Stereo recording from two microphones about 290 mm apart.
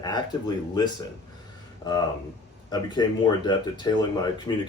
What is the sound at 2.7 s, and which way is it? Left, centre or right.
Speech, centre.